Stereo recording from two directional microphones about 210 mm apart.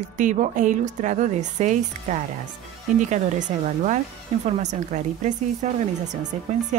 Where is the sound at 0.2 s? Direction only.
35° right (ahead or behind).